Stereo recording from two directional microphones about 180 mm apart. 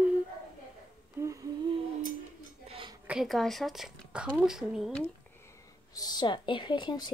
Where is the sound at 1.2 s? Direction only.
20° right (ahead or behind).